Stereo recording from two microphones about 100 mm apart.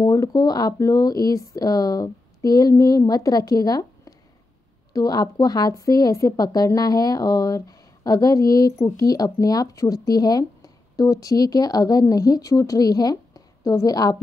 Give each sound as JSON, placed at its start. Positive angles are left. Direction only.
{"t": 0.0, "sound": "a woman's voice", "side_deg": 30}